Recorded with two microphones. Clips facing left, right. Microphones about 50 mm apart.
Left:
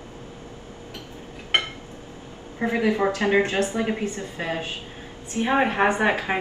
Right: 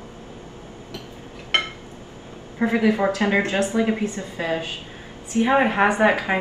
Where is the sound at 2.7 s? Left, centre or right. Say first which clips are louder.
Right 2 dB; right.